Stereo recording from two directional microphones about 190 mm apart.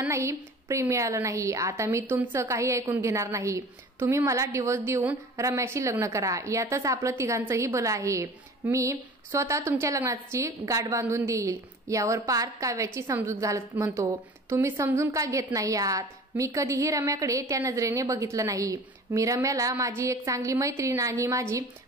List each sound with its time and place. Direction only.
0.0 s a woman's voice: 15° right (ahead or behind)